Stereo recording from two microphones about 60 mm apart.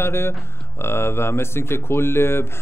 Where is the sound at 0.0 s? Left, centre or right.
Left.